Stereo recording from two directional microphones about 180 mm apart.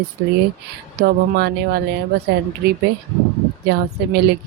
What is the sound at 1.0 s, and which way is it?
Speech, 65° right (ahead or behind).